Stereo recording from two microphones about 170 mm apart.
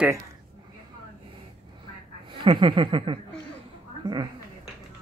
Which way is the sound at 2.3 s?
30° right (ahead or behind).